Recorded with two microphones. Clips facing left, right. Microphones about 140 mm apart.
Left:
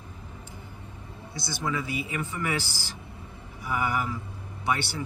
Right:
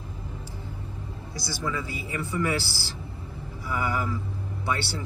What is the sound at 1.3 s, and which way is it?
Speech, 20° left (ahead or behind).